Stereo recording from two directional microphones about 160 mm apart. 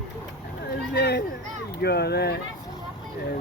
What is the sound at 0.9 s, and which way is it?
Speech, 90° left.